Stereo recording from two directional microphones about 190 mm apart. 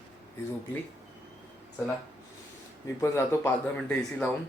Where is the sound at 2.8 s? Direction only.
15° left (ahead or behind).